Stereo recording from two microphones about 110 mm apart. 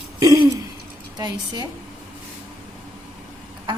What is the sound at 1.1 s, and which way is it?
Speech, 40° right (ahead or behind).